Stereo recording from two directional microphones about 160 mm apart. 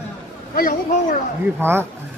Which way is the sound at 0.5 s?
60° left (ahead or behind).